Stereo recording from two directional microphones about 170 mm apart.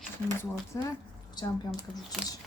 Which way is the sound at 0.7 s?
20° left (ahead or behind).